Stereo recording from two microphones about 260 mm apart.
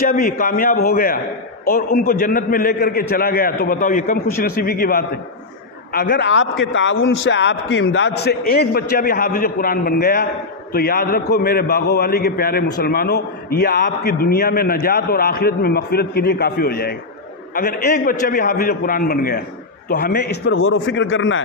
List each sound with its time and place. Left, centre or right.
0.0 s a man's voice: left